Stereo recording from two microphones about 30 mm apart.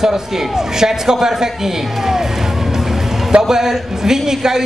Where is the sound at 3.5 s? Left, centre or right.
Centre.